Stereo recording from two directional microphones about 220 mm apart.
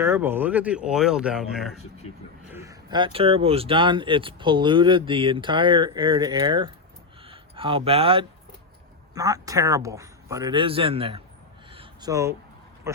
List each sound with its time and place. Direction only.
0.0 s speech: 10° right (ahead or behind)
2.5 s speech: 15° right (ahead or behind)
11.7 s a sound: 20° right (ahead or behind)